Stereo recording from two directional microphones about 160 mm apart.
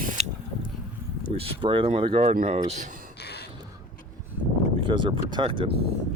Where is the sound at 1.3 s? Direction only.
35° right (ahead or behind).